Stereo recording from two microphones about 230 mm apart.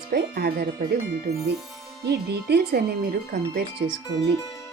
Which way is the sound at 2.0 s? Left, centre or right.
Right.